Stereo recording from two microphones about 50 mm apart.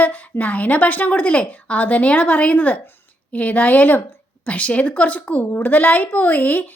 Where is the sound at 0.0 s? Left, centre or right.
Left.